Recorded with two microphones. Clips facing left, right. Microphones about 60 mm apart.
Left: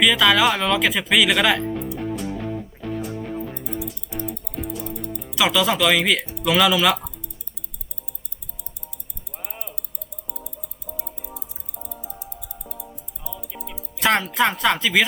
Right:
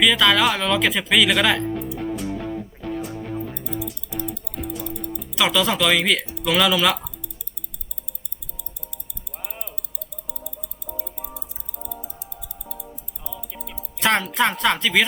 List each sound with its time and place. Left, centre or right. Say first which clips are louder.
0.0 s speech: left 1 dB; centre
4.4 s music: left 3 dB; left
5.4 s speech: left 1 dB; centre
9.5 s music: left 1 dB; centre
13.2 s music: left 1 dB; centre